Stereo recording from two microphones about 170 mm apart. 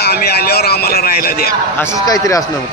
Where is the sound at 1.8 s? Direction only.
20° left (ahead or behind).